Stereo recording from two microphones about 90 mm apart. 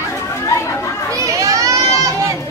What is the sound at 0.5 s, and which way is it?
Chatter, 30° left (ahead or behind).